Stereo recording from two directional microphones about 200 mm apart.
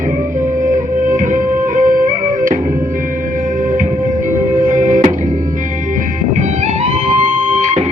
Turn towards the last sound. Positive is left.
turn(degrees=-35)  # may be behind; listen again after turning